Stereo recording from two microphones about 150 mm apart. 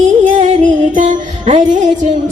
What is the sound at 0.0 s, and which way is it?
Music, 55° right (ahead or behind).